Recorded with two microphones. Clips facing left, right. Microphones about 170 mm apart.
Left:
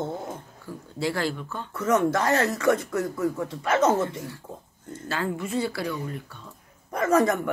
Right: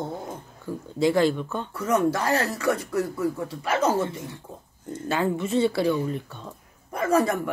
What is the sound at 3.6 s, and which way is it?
Speech, 25° left (ahead or behind).